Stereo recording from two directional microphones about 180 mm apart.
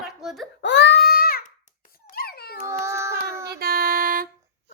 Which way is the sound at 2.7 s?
15° right (ahead or behind).